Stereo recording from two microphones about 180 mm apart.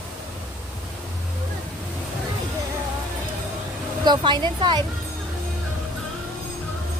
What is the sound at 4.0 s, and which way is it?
Speech, 25° right (ahead or behind).